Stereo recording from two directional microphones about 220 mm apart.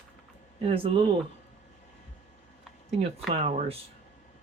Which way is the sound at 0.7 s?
25° right (ahead or behind).